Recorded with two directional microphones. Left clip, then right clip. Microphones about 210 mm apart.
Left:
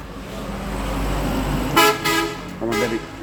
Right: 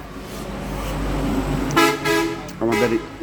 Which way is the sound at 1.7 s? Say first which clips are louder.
Left 2 dB; 55° left (ahead or behind).